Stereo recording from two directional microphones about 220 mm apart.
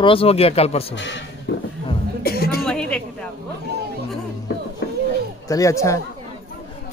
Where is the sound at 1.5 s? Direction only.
50° left (ahead or behind).